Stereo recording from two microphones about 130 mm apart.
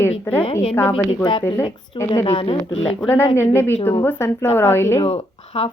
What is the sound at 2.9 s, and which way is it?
A woman's voice, 15° left (ahead or behind).